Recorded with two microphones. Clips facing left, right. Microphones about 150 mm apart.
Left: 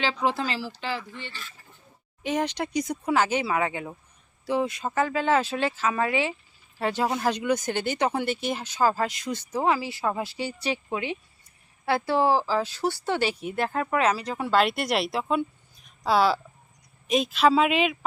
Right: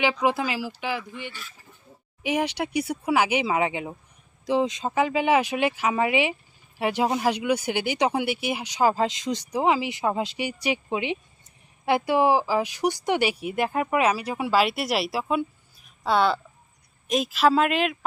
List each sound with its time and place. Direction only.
0.0 s speech: 15° right (ahead or behind)